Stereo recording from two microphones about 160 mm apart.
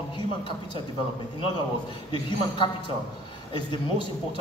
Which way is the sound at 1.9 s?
30° left (ahead or behind).